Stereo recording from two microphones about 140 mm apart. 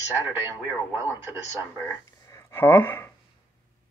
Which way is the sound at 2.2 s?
20° left (ahead or behind).